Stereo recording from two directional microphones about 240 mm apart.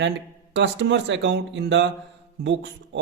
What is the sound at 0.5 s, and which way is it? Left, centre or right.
A man's voice, right.